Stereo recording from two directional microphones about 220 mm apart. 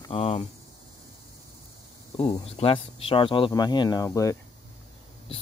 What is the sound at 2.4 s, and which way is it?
Speech, 25° left (ahead or behind).